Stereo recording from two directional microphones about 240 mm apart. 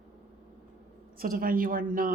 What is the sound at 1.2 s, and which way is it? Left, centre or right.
Speech, right.